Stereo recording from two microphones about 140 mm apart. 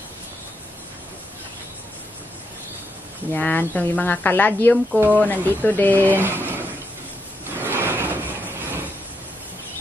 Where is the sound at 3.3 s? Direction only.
10° left (ahead or behind).